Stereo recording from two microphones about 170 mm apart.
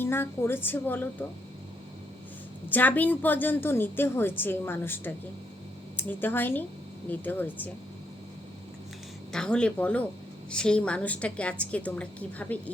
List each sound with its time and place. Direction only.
0.0 s a woman's voice: 15° left (ahead or behind)
2.6 s a woman's voice: 10° left (ahead or behind)
9.3 s a woman's voice: 5° left (ahead or behind)